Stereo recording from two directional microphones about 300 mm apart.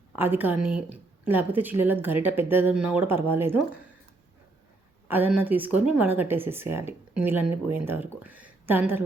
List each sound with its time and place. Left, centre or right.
0.2 s speech: centre
5.0 s speech: centre